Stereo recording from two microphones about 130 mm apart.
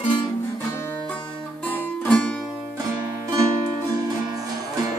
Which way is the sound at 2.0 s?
10° left (ahead or behind).